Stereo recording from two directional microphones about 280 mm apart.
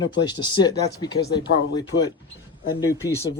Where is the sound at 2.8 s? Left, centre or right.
Centre.